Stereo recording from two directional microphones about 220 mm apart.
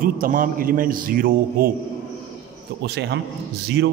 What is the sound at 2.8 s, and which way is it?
Speech, 50° right (ahead or behind).